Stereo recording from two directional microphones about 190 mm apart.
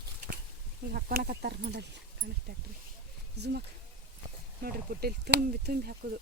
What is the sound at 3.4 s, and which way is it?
Speech, 55° right (ahead or behind).